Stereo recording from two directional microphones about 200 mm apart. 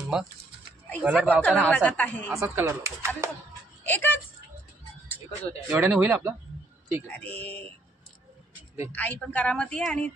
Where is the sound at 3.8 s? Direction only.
10° left (ahead or behind).